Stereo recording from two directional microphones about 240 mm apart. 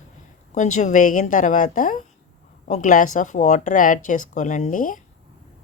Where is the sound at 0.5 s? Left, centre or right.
Left.